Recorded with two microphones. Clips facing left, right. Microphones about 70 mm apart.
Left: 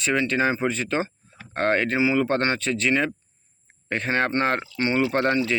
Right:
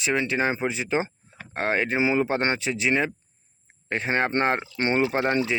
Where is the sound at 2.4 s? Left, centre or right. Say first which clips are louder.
Left 1 dB; centre.